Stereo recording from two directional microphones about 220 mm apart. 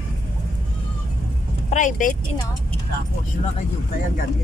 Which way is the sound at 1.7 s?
35° left (ahead or behind).